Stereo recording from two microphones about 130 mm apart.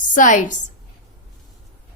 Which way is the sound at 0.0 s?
80° left.